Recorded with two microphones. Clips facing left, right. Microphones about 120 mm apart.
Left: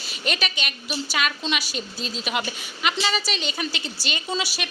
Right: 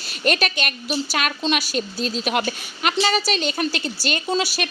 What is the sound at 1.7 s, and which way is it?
A woman's voice, 50° right (ahead or behind).